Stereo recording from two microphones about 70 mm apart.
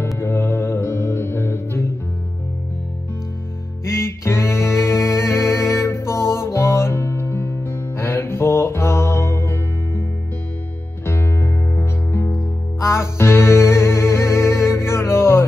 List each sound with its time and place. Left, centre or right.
0.2 s music: left
3.9 s music: left
11.1 s music: left